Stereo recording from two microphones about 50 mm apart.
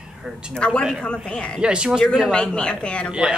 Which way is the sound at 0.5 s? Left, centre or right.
Centre.